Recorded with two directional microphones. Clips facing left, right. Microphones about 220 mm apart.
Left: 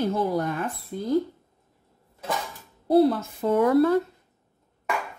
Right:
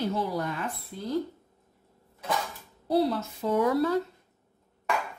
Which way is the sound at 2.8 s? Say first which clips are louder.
Left 6 dB; 50° left (ahead or behind).